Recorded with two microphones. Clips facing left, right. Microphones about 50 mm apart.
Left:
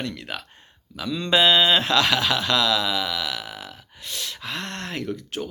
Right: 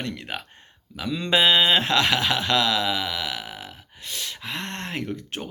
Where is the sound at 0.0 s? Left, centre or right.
Right.